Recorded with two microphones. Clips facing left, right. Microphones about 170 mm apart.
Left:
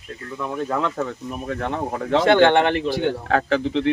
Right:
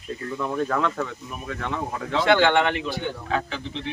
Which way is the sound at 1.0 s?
40° left (ahead or behind).